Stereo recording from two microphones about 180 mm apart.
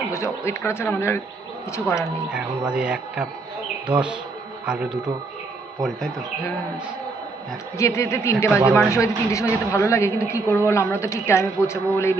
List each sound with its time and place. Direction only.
0.1 s a woman's voice: 15° left (ahead or behind)
2.3 s a man's voice: 5° right (ahead or behind)
7.8 s a woman's voice: 15° left (ahead or behind)